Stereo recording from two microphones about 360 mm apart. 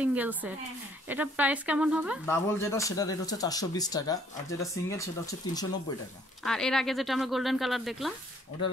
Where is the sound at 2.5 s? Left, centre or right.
Centre.